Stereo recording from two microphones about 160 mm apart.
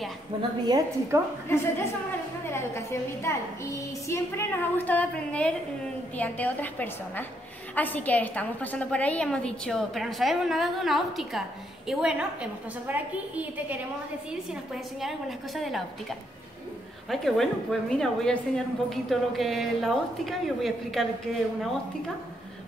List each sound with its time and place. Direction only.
0.4 s a woman's voice: 25° right (ahead or behind)
1.5 s a woman's voice: 15° left (ahead or behind); by 21.1 s centre (ahead or behind)